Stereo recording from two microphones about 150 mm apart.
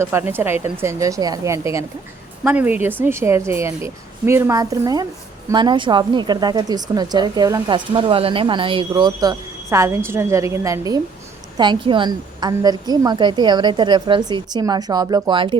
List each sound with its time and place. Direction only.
0.0 s a woman's voice: 15° right (ahead or behind)
7.9 s a woman's voice: 35° right (ahead or behind)